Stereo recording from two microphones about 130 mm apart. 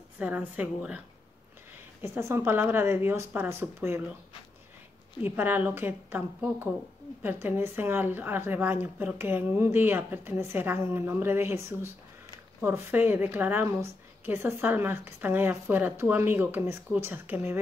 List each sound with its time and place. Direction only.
0.2 s a woman's voice: 10° right (ahead or behind)
5.2 s a woman's voice: 15° right (ahead or behind)